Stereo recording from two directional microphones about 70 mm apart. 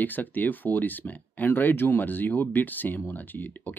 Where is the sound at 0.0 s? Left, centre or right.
Left.